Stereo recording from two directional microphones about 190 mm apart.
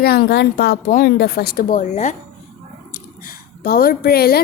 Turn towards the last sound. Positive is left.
turn(degrees=55)  # may be behind; listen again after turning